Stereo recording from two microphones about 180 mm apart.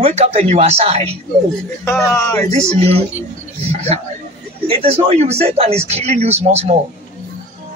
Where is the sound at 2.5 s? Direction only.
35° right (ahead or behind).